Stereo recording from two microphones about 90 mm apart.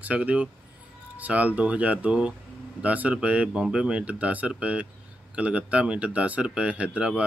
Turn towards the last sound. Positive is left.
turn(degrees=-10)  # may be behind; listen again after turning